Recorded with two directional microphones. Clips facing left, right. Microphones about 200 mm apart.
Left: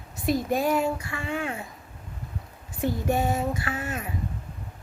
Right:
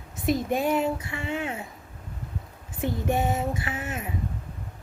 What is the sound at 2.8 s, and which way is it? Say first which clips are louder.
Speech: left 1 dB; 20° right (ahead or behind).